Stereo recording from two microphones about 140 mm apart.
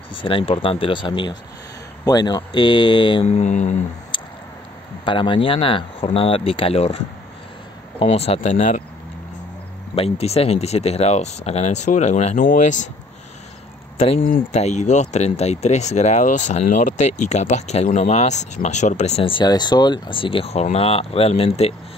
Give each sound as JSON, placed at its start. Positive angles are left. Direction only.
{"t": 0.2, "sound": "speech", "side_deg": 40}
{"t": 3.3, "sound": "mantra", "side_deg": 55}
{"t": 5.0, "sound": "speech", "side_deg": 35}
{"t": 8.0, "sound": "speech", "side_deg": 45}
{"t": 9.9, "sound": "speech", "side_deg": 45}
{"t": 12.4, "sound": "mantra", "side_deg": 70}
{"t": 14.5, "sound": "speech", "side_deg": 55}
{"t": 19.3, "sound": "speech", "side_deg": 30}